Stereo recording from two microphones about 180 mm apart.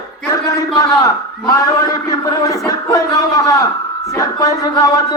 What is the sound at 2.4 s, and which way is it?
Speech, 20° left (ahead or behind).